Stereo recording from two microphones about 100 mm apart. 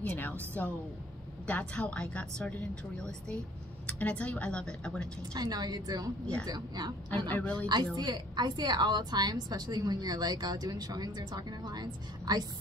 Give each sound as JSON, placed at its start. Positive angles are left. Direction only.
{"t": 0.0, "sound": "a woman's voice", "side_deg": 20}
{"t": 5.3, "sound": "a woman's voice", "side_deg": -40}
{"t": 7.2, "sound": "a woman's voice", "side_deg": 15}
{"t": 7.5, "sound": "a woman's voice", "side_deg": -45}